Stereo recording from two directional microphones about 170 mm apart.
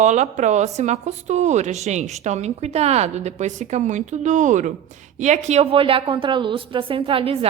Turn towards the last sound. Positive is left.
turn(degrees=-35)  # may be behind; listen again after turning